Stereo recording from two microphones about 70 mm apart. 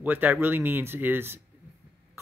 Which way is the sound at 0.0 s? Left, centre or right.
Right.